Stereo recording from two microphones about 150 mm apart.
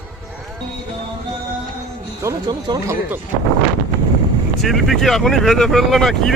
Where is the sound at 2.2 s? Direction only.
25° right (ahead or behind).